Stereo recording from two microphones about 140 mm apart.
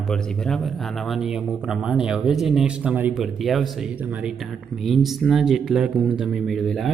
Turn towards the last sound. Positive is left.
turn(degrees=0)  # may be behind; listen again after turning